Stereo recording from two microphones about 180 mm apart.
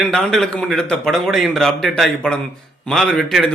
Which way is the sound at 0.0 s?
5° left (ahead or behind).